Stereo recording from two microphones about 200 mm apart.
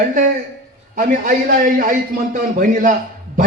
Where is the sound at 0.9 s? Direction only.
40° right (ahead or behind).